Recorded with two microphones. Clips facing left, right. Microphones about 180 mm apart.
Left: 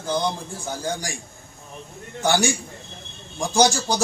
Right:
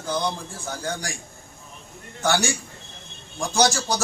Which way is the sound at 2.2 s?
15° left (ahead or behind).